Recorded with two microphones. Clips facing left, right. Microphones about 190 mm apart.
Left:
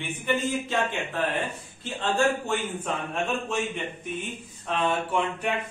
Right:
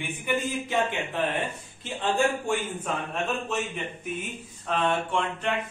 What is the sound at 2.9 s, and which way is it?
Speech, centre (ahead or behind).